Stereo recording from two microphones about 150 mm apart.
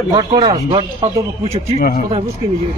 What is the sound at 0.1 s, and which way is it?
Speech, 30° right (ahead or behind).